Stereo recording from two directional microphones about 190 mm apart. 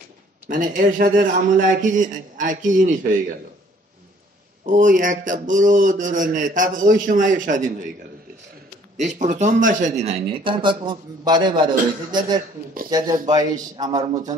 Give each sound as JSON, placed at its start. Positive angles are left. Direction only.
{"t": 0.5, "sound": "a man's voice", "side_deg": -45}
{"t": 4.6, "sound": "a man's voice", "side_deg": -45}
{"t": 8.9, "sound": "speech", "side_deg": -40}